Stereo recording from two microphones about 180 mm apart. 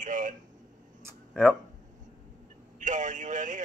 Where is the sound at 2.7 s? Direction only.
45° right (ahead or behind).